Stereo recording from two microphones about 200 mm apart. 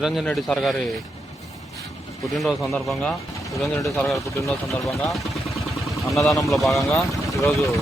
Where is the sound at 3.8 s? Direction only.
15° left (ahead or behind).